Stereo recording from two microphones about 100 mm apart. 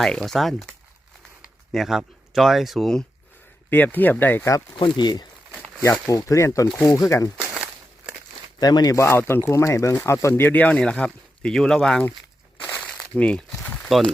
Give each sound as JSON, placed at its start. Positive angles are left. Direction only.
{"t": 0.0, "sound": "speech", "side_deg": 5}
{"t": 1.7, "sound": "speech", "side_deg": -5}
{"t": 3.7, "sound": "speech", "side_deg": 15}
{"t": 4.8, "sound": "speech", "side_deg": 45}
{"t": 6.1, "sound": "speech", "side_deg": 35}
{"t": 7.5, "sound": "a sound", "side_deg": -10}
{"t": 8.5, "sound": "speech", "side_deg": 40}
{"t": 9.0, "sound": "speech", "side_deg": 25}
{"t": 12.6, "sound": "crumpling", "side_deg": 10}
{"t": 13.8, "sound": "speech", "side_deg": 0}